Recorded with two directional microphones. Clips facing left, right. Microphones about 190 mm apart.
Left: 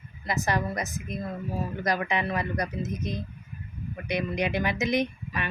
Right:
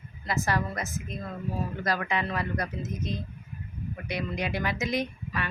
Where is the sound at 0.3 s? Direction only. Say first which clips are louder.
Left 1 dB; 20° left (ahead or behind).